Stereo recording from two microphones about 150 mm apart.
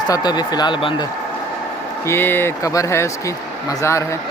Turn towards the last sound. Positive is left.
turn(degrees=20)  # may be behind; listen again after turning